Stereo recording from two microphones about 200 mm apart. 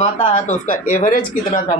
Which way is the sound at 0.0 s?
35° left (ahead or behind).